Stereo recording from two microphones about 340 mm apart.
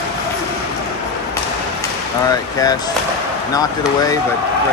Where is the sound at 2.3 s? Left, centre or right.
Centre.